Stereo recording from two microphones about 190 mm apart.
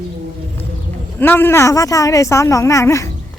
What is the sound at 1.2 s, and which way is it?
Speech, 10° left (ahead or behind).